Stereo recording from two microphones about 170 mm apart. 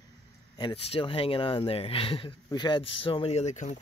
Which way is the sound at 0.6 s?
30° left (ahead or behind).